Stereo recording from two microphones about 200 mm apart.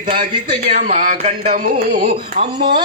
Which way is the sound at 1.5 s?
50° right (ahead or behind).